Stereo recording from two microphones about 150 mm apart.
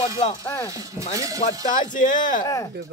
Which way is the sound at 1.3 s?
55° left (ahead or behind).